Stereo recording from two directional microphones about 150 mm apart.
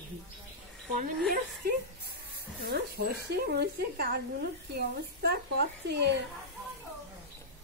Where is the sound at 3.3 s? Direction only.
90° right.